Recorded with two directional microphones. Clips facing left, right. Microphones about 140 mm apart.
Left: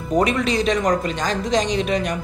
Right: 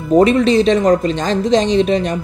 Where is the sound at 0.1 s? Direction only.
30° right (ahead or behind).